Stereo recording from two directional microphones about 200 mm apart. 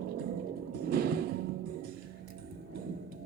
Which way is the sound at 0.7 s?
50° right (ahead or behind).